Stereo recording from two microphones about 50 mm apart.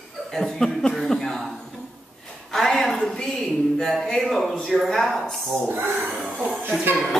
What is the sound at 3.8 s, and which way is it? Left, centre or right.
Speech, centre.